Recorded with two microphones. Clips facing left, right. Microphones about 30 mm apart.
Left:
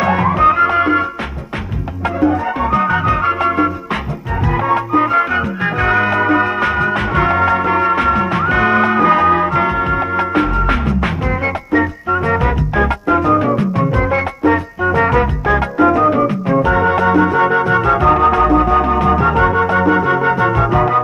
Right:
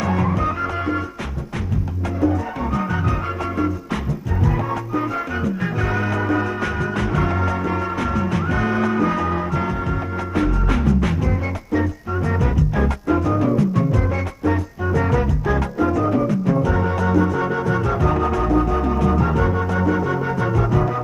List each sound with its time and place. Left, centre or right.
0.0 s music: left
2.2 s music: left